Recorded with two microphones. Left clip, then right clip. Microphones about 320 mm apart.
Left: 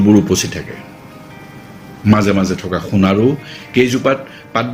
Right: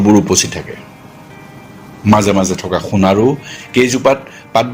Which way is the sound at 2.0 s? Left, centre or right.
Centre.